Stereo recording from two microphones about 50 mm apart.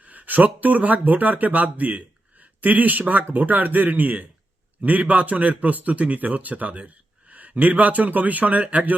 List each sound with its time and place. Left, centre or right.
0.0 s speech: right